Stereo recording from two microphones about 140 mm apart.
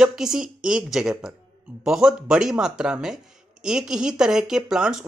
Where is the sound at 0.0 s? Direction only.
5° right (ahead or behind).